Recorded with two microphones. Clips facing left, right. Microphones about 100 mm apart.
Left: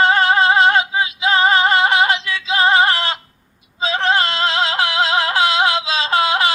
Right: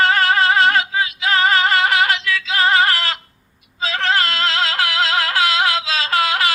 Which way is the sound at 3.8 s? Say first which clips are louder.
Left 2 dB; 25° left (ahead or behind).